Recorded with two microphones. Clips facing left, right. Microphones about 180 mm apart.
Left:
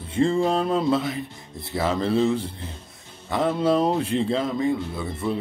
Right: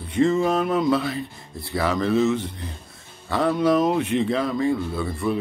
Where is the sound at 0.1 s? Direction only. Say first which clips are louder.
Right 1 dB; 30° left (ahead or behind).